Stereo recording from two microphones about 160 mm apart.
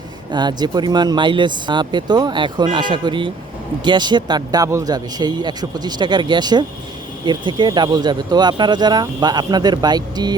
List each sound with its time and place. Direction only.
0.3 s speech: 25° right (ahead or behind)